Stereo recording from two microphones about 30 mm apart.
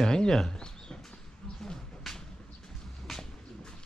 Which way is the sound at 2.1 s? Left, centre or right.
Centre.